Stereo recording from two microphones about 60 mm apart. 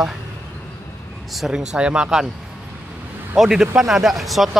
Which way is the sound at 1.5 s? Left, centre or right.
Centre.